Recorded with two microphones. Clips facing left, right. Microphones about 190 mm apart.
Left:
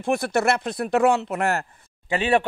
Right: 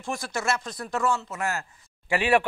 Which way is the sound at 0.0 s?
60° left (ahead or behind).